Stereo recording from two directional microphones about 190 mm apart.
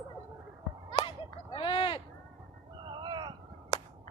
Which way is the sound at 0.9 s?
25° left (ahead or behind).